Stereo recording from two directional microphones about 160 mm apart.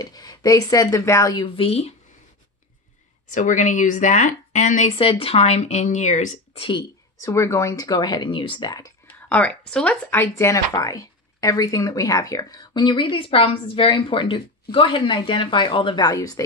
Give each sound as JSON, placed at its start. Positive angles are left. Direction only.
{"t": 0.0, "sound": "speech", "side_deg": 25}
{"t": 3.3, "sound": "speech", "side_deg": 55}
{"t": 6.6, "sound": "speech", "side_deg": 30}
{"t": 7.2, "sound": "speech", "side_deg": 20}
{"t": 9.0, "sound": "a sound", "side_deg": 10}
{"t": 9.7, "sound": "speech", "side_deg": 5}